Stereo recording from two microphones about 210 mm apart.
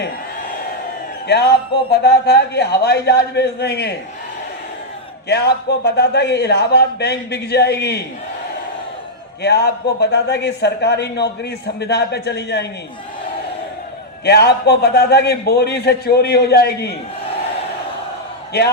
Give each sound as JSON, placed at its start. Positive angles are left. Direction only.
{"t": 1.3, "sound": "a man's voice", "side_deg": 55}
{"t": 5.3, "sound": "a man's voice", "side_deg": 50}
{"t": 9.4, "sound": "a man's voice", "side_deg": 50}
{"t": 14.3, "sound": "a man's voice", "side_deg": 50}